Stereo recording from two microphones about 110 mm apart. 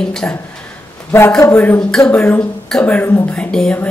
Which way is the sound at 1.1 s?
20° left (ahead or behind).